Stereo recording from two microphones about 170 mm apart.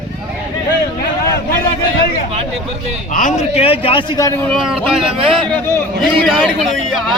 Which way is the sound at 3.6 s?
35° left (ahead or behind).